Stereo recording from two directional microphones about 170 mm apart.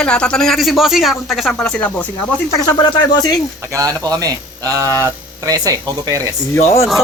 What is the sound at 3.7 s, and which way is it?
A man's voice, 20° right (ahead or behind).